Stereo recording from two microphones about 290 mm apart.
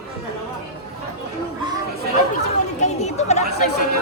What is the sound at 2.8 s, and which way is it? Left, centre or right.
Chatter, left.